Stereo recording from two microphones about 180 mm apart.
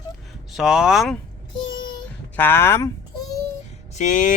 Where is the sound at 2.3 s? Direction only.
10° left (ahead or behind).